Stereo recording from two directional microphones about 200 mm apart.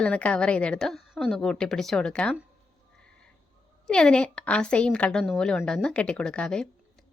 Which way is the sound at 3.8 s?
5° left (ahead or behind).